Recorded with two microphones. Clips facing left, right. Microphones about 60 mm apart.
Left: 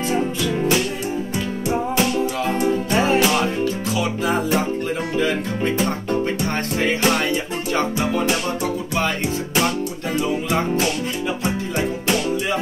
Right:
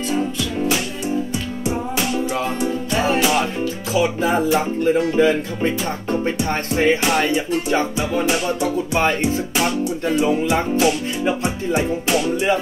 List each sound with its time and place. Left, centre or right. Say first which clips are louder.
1.7 s music: left 2 dB; centre
5.1 s speech: right 4 dB; right
10.5 s music: right 3 dB; centre